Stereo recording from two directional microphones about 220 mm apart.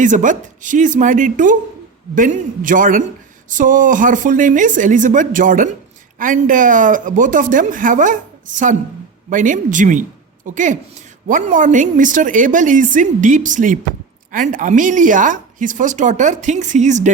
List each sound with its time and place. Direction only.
0.0 s speech: 35° right (ahead or behind)